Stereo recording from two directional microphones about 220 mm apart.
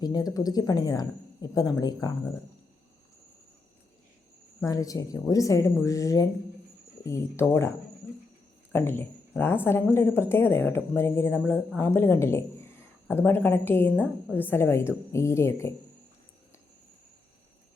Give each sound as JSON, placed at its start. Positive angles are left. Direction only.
{"t": 0.0, "sound": "speech", "side_deg": 15}
{"t": 4.6, "sound": "speech", "side_deg": 15}
{"t": 8.7, "sound": "speech", "side_deg": 10}